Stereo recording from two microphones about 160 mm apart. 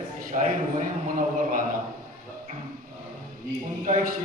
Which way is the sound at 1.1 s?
55° right (ahead or behind).